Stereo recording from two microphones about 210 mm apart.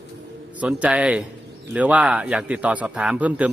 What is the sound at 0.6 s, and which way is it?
A man's voice, 5° right (ahead or behind).